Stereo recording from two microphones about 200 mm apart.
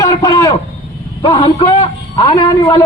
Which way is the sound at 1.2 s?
25° left (ahead or behind).